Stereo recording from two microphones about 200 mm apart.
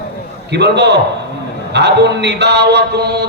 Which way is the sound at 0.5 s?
60° right (ahead or behind).